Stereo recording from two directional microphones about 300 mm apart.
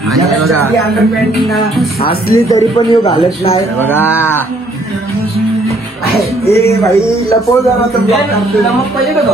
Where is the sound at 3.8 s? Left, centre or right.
Centre.